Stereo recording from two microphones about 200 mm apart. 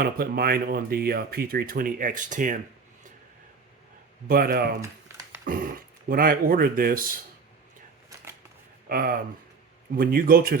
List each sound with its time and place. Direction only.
0.0 s speech: 50° right (ahead or behind)
4.3 s speech: 50° right (ahead or behind)
4.8 s typing: 15° right (ahead or behind)
5.5 s speech: 45° right (ahead or behind)
8.9 s speech: 45° right (ahead or behind)